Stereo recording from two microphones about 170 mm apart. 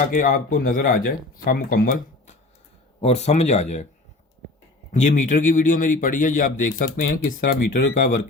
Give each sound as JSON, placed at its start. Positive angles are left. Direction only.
{"t": 0.1, "sound": "speech", "side_deg": 55}
{"t": 3.0, "sound": "speech", "side_deg": 40}
{"t": 4.9, "sound": "a man's voice", "side_deg": 45}